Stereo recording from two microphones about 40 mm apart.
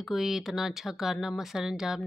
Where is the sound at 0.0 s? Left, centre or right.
Centre.